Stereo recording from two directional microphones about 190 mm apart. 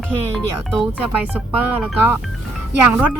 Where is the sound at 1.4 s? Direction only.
10° right (ahead or behind).